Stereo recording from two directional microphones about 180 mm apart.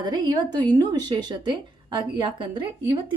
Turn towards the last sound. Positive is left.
turn(degrees=-30)  # may be behind; listen again after turning